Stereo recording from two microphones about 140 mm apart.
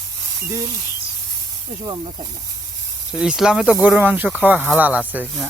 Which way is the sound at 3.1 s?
5° right (ahead or behind).